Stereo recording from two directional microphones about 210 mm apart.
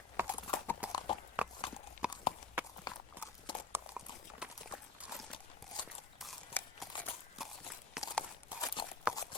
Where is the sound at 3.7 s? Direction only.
5° right (ahead or behind).